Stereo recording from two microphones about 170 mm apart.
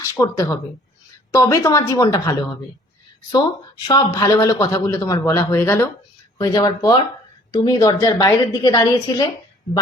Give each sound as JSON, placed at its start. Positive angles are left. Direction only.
{"t": 0.0, "sound": "a man's voice", "side_deg": 20}
{"t": 3.8, "sound": "a man's voice", "side_deg": 25}